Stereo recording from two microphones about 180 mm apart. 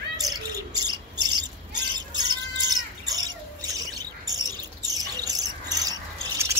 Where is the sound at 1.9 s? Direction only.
25° right (ahead or behind).